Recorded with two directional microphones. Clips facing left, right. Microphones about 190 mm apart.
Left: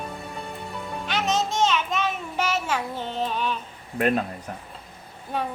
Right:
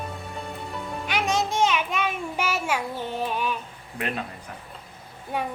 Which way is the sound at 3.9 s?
45° left (ahead or behind).